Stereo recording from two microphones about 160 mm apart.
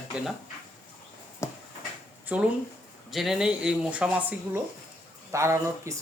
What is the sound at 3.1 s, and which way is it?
Speech, centre (ahead or behind).